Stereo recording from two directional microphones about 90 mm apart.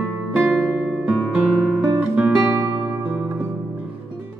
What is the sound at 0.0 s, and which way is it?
Music, 15° right (ahead or behind).